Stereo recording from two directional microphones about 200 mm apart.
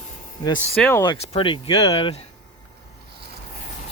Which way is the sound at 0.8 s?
5° left (ahead or behind).